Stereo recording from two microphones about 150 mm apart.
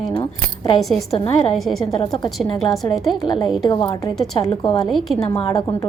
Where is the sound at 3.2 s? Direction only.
30° left (ahead or behind).